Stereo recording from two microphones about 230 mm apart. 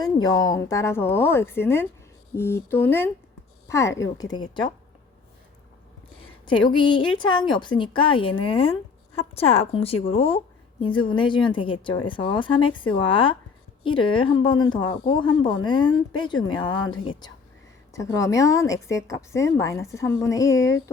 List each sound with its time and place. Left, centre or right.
0.0 s a woman's voice: centre
6.4 s a woman's voice: centre